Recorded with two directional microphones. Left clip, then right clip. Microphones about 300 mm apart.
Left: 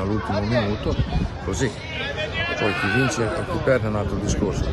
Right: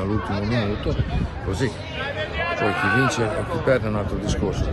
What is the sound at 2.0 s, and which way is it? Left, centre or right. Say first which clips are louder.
Speech: even; centre.